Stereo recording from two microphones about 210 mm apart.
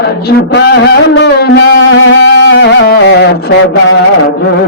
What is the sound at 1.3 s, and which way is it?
Music, 50° left (ahead or behind).